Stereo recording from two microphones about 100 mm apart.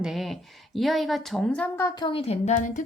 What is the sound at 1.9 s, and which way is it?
Speech, 50° left (ahead or behind).